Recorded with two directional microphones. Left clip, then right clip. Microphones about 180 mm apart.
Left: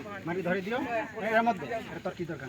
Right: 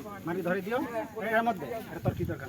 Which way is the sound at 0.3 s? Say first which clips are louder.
Even; 15° left (ahead or behind).